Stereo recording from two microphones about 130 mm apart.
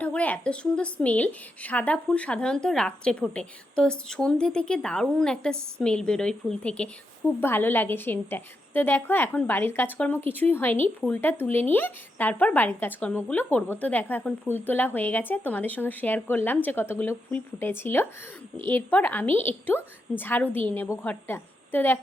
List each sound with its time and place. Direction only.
0.0 s a woman's voice: 10° left (ahead or behind)